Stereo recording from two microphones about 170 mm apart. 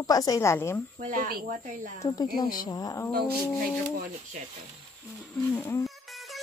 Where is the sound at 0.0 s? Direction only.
20° left (ahead or behind).